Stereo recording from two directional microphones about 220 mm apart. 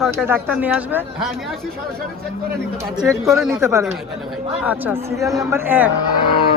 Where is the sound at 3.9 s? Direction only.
Centre (ahead or behind).